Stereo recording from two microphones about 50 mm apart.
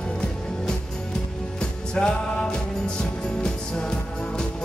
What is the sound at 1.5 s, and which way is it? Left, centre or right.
Music, centre.